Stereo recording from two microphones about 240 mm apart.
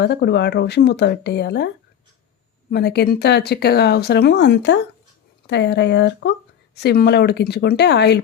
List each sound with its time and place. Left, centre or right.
0.0 s speech: left